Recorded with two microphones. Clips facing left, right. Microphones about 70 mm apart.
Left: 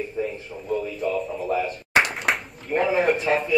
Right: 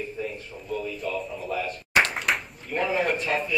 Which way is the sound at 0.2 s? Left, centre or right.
Left.